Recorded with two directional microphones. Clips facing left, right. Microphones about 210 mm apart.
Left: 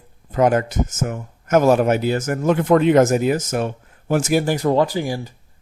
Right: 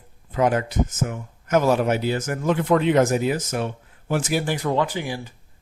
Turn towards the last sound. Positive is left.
turn(degrees=40)  # may be behind; listen again after turning